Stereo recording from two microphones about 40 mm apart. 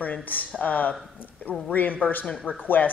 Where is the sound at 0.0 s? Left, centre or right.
Left.